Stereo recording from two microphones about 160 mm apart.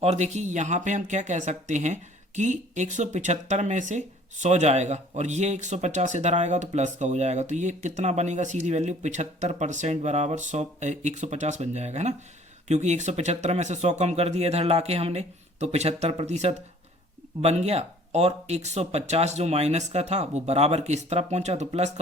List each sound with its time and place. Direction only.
0.0 s speech: 40° right (ahead or behind)